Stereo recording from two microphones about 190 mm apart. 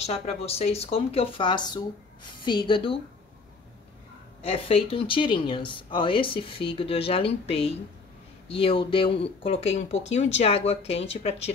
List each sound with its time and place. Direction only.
0.0 s speech: 30° left (ahead or behind)
4.4 s speech: 30° left (ahead or behind)